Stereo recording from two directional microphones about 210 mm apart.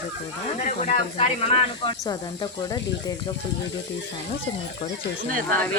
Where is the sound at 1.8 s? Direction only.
20° left (ahead or behind).